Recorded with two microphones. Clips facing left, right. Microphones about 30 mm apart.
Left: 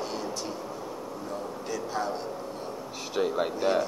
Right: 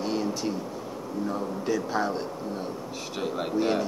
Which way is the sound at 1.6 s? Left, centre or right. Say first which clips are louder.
Right 5 dB; centre.